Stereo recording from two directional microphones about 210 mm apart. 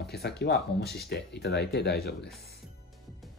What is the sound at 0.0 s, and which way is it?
Speech, 50° left (ahead or behind).